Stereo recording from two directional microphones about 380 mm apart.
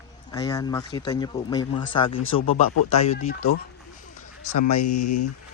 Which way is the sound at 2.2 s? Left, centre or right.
Left.